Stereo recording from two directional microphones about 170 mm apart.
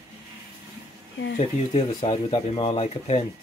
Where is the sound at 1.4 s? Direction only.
35° left (ahead or behind).